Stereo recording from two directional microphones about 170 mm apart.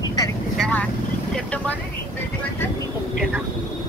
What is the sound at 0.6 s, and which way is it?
Vehicle, 10° left (ahead or behind).